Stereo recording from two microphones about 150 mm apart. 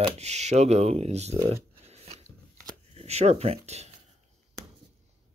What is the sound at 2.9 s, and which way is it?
Speech, 45° right (ahead or behind).